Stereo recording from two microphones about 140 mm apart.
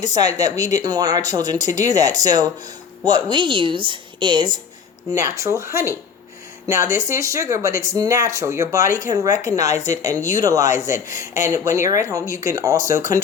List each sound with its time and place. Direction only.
0.0 s speech: 25° right (ahead or behind)
1.6 s speech: 60° left (ahead or behind)
1.9 s a woman's voice: 25° right (ahead or behind)
5.1 s speech: 20° right (ahead or behind)